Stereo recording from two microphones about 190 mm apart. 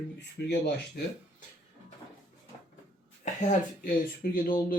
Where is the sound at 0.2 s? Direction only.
60° left (ahead or behind).